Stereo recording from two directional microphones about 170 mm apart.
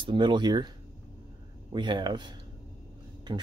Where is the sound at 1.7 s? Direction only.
25° right (ahead or behind).